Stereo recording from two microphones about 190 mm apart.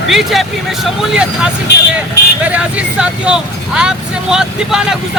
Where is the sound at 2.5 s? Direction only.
5° right (ahead or behind).